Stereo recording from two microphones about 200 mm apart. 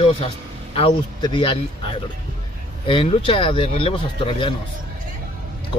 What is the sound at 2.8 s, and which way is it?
Speech, 25° left (ahead or behind).